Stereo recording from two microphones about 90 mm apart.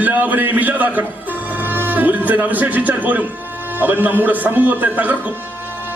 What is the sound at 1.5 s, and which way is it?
Music, 20° right (ahead or behind).